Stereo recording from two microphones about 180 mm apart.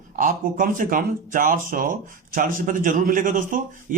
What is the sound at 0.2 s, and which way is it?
A man's voice, 50° right (ahead or behind).